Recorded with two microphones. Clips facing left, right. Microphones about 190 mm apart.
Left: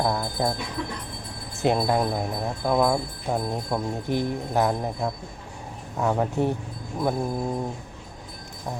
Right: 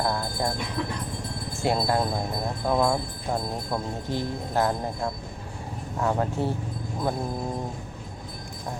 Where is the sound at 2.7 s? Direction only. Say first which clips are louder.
Left 2 dB; 5° left (ahead or behind).